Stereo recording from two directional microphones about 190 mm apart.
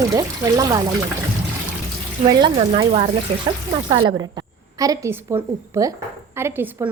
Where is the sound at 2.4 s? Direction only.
25° right (ahead or behind).